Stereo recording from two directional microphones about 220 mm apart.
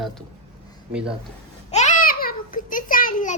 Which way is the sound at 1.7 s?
35° left (ahead or behind).